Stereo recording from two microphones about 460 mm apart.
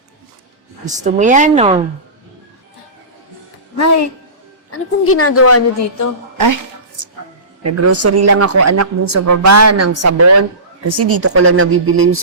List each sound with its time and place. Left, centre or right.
0.9 s a woman's voice: centre
4.7 s a woman's voice: left
6.3 s a sound: right
7.6 s speech: right